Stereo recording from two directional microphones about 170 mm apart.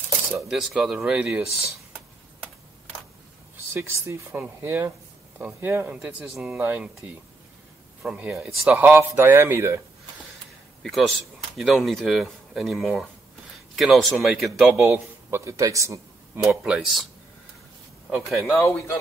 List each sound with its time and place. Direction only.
0.5 s speech: 5° right (ahead or behind)
3.7 s speech: 15° right (ahead or behind)
10.8 s speech: centre (ahead or behind); by 16.0 s 20° right (ahead or behind)
16.4 s speech: 5° right (ahead or behind)
18.4 s speech: 15° left (ahead or behind)